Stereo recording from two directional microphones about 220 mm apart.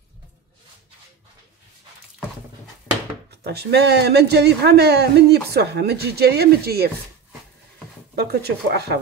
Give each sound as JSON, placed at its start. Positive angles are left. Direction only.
{"t": 3.3, "sound": "speech", "side_deg": -50}
{"t": 8.2, "sound": "speech", "side_deg": -45}